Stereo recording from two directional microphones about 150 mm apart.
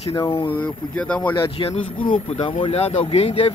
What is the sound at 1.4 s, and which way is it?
Speech, 35° left (ahead or behind).